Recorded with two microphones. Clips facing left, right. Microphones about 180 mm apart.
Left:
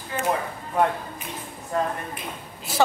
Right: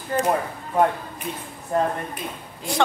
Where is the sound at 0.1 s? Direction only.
45° right (ahead or behind).